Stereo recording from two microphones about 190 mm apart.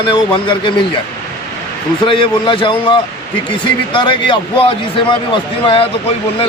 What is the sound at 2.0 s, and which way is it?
Speech, 25° left (ahead or behind).